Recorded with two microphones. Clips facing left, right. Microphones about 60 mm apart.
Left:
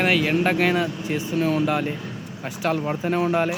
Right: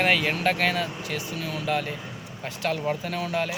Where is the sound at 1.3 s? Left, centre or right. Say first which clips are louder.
Left 10 dB; left.